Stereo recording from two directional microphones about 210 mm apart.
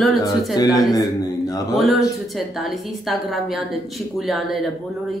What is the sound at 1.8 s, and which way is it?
Speech, centre (ahead or behind).